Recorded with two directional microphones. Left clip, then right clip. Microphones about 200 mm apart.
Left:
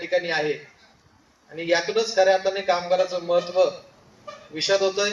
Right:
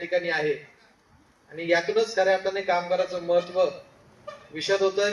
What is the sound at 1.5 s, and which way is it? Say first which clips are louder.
A man's voice: left 1 dB; 30° left (ahead or behind).